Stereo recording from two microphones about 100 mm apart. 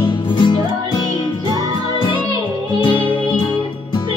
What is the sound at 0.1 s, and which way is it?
Music, 50° left (ahead or behind).